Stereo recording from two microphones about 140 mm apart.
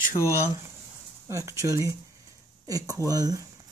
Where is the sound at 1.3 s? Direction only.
20° right (ahead or behind).